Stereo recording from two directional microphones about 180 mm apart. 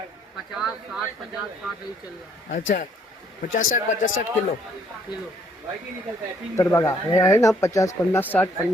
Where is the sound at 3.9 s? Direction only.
40° left (ahead or behind).